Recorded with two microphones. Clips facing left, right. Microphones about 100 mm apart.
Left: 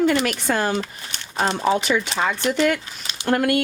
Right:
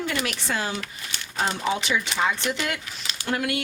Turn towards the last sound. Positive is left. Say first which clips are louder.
# left 7 dB
turn(degrees=50)  # may be behind; listen again after turning